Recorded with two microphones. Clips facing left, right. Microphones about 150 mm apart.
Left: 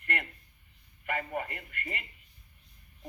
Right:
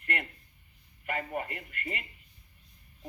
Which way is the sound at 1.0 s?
25° right (ahead or behind).